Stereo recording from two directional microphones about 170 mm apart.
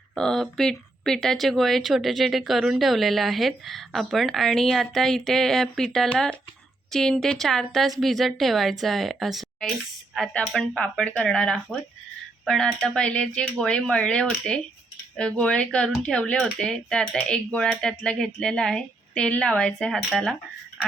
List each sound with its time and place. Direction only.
0.1 s speech: 5° left (ahead or behind)